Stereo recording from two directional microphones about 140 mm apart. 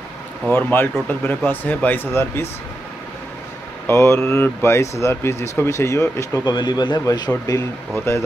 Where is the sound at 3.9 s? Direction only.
20° left (ahead or behind).